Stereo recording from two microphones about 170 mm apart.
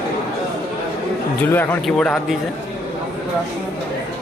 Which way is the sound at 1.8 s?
5° left (ahead or behind).